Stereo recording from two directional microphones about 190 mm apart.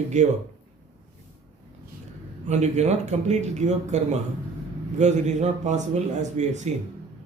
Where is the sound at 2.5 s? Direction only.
35° right (ahead or behind).